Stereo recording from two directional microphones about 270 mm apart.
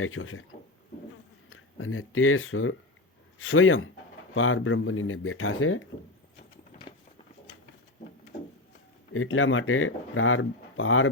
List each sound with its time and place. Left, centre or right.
0.0 s speech: left
1.5 s speech: left
9.1 s speech: left